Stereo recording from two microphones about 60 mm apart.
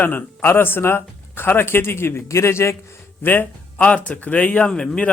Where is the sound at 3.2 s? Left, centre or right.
Left; by 5.1 s centre.